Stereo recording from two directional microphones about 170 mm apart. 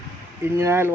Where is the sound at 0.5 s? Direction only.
15° right (ahead or behind).